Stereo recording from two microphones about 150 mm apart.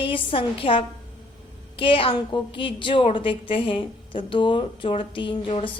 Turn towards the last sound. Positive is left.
turn(degrees=35)  # may be behind; listen again after turning